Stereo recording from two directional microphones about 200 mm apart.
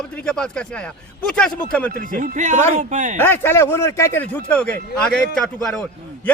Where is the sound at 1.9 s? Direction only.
45° right (ahead or behind).